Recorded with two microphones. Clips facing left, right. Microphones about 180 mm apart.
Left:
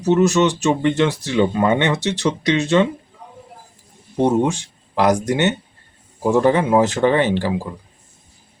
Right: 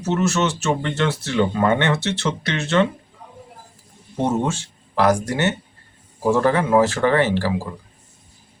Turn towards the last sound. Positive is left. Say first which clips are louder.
# left 2 dB
turn(degrees=20)  # may be behind; listen again after turning